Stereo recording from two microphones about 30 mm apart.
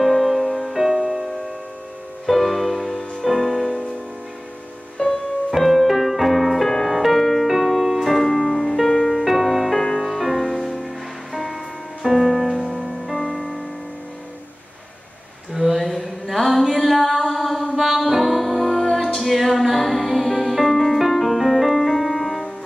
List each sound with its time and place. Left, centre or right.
0.0 s music: centre
0.9 s music: centre
2.2 s music: centre
5.0 s music: left
5.6 s music: centre
7.2 s music: centre
7.4 s music: centre
9.1 s music: centre
12.0 s music: centre
15.5 s a sound: centre
17.6 s music: centre